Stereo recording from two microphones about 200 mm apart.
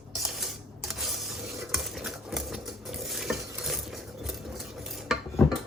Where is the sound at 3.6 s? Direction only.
Centre (ahead or behind).